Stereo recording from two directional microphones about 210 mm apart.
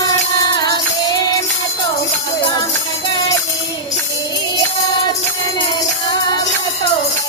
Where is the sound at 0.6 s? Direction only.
20° left (ahead or behind).